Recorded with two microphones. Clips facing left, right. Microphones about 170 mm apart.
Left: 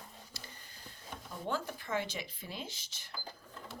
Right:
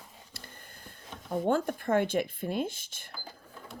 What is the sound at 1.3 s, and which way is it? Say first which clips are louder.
Speech: right 10 dB; 55° right (ahead or behind).